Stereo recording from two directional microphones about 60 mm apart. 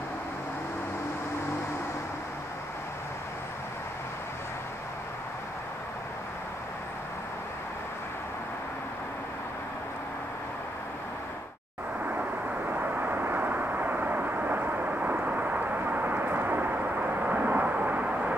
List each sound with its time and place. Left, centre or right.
12.1 s vehicle: right